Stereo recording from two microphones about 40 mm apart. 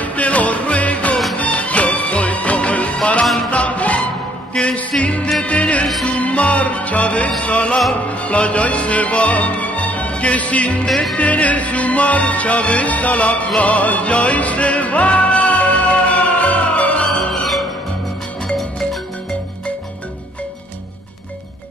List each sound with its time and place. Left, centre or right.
0.0 s music: left
17.3 s music: centre